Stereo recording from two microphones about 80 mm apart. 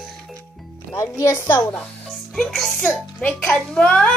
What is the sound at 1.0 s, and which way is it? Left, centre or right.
Speech, left.